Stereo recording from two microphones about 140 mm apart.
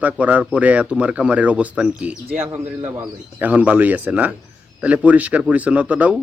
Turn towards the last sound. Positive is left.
turn(degrees=-10)  # may be behind; listen again after turning